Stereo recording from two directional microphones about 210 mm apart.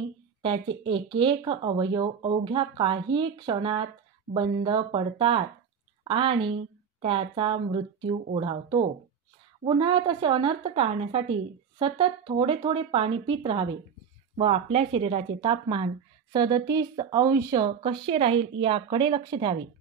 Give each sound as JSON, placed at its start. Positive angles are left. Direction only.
{"t": 0.4, "sound": "speech", "side_deg": -25}